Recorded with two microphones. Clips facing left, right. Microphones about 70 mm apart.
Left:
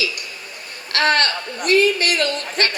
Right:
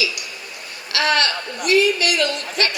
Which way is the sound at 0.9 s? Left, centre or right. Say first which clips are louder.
Left 1 dB; left.